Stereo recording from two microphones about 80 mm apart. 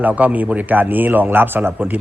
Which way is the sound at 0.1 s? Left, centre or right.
Centre.